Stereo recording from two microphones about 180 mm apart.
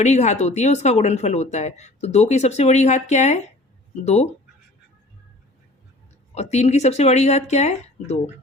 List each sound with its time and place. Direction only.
0.0 s speech: 40° left (ahead or behind)
6.3 s speech: 40° left (ahead or behind)